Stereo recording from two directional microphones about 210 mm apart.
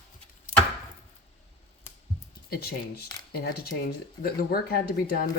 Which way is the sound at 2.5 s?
45° left (ahead or behind).